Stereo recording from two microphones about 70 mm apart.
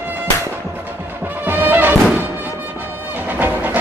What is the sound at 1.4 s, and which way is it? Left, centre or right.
Music, right.